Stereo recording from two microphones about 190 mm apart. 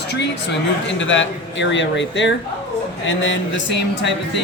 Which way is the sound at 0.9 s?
75° left (ahead or behind).